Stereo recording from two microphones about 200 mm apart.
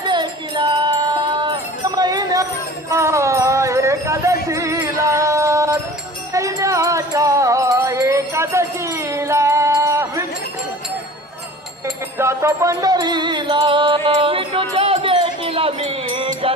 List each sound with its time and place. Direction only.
0.0 s music: 20° right (ahead or behind)
12.1 s music: 15° right (ahead or behind)